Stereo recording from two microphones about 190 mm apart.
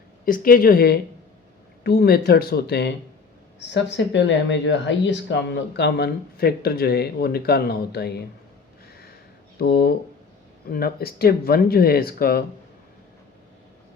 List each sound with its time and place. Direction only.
0.3 s speech: 50° left (ahead or behind)
9.6 s speech: 55° left (ahead or behind)